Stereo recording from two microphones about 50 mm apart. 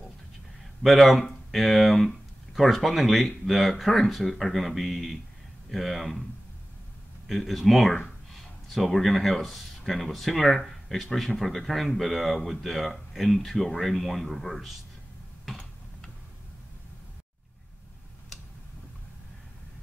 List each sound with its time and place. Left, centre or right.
0.8 s speech: centre
7.2 s speech: centre